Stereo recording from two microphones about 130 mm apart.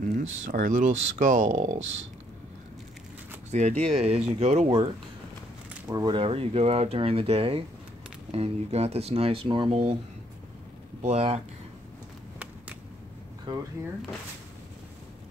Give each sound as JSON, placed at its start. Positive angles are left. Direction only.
{"t": 0.0, "sound": "speech", "side_deg": -90}
{"t": 3.5, "sound": "speech", "side_deg": -60}
{"t": 5.9, "sound": "speech", "side_deg": -30}
{"t": 6.2, "sound": "speech", "side_deg": -50}
{"t": 11.0, "sound": "speech", "side_deg": -55}
{"t": 13.5, "sound": "speech", "side_deg": -35}